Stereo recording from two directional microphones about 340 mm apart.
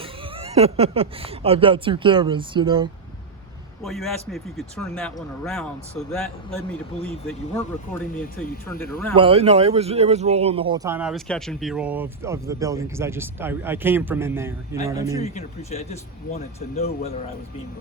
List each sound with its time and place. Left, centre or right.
0.0 s speech: centre
3.8 s speech: centre
9.1 s speech: centre
15.2 s speech: centre